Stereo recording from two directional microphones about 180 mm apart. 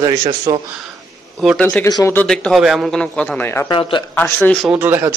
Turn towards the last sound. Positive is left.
turn(degrees=-10)  # may be behind; listen again after turning